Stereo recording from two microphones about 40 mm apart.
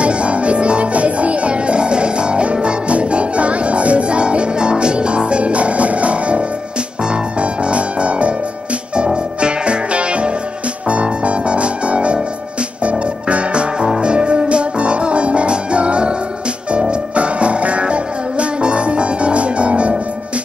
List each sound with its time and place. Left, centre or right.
0.0 s music: right
13.3 s music: right